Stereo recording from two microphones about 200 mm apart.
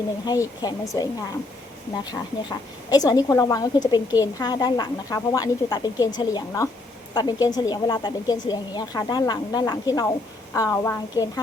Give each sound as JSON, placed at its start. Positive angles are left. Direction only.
{"t": 0.3, "sound": "a woman's voice", "side_deg": 20}
{"t": 2.0, "sound": "a woman's voice", "side_deg": 20}